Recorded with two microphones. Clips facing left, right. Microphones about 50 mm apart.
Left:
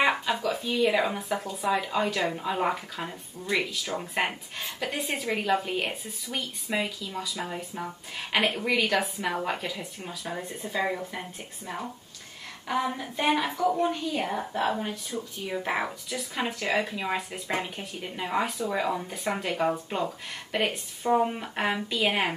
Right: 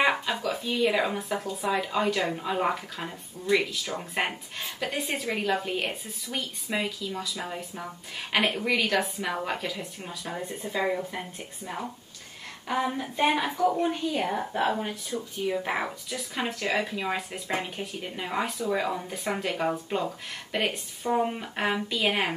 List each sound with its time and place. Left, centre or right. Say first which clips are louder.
0.0 s speech: even; centre
12.6 s a sound: even; centre
13.1 s speech: even; centre